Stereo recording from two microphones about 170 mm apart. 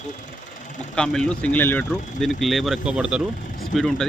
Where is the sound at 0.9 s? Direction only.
5° left (ahead or behind).